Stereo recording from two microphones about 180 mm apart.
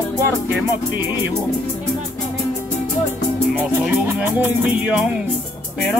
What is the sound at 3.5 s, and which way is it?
Music, 10° right (ahead or behind).